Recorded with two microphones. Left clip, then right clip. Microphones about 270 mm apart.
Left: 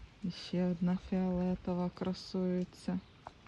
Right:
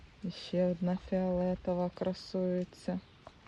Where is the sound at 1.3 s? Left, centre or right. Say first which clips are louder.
Right 5 dB; right.